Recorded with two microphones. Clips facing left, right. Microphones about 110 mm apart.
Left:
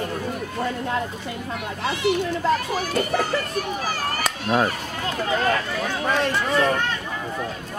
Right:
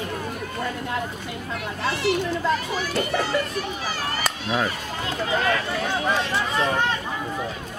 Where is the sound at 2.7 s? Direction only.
45° left (ahead or behind).